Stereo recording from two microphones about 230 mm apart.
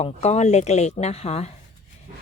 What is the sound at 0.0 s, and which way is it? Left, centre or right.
Speech, left.